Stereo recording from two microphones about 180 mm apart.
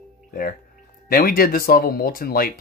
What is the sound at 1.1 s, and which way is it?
Speech, 55° left (ahead or behind).